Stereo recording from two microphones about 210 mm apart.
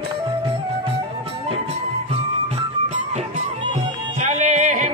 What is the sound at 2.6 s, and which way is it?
Music, 30° right (ahead or behind).